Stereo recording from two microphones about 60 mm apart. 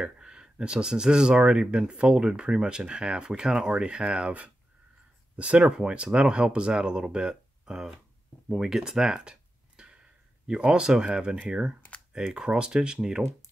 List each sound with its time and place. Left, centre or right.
0.0 s speech: centre
8.5 s a sound: centre
10.4 s speech: centre